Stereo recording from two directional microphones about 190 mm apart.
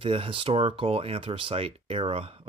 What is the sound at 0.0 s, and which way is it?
Speech, 30° right (ahead or behind).